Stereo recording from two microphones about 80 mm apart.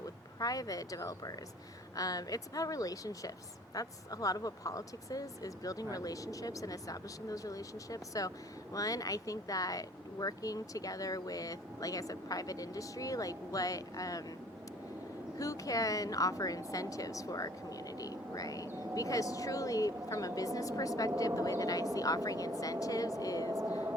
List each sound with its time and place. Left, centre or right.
0.3 s speech: left
15.4 s a woman's voice: left
23.6 s whispering: right